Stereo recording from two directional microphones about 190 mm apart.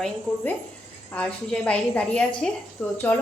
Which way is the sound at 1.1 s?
5° left (ahead or behind).